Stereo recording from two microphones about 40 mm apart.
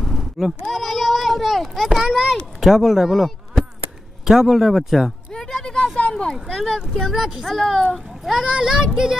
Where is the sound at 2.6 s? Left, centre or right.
Centre.